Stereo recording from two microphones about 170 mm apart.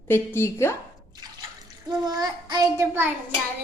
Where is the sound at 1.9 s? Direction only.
25° right (ahead or behind).